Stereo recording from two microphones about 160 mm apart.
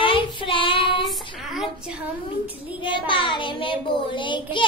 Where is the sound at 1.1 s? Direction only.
Centre (ahead or behind).